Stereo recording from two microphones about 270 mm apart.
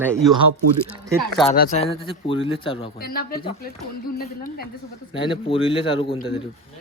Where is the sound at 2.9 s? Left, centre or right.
Left.